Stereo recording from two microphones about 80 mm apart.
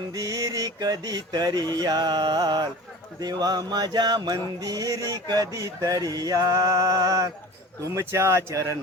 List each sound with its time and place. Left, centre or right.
0.1 s a sound: right
3.2 s music: right
7.9 s speech: right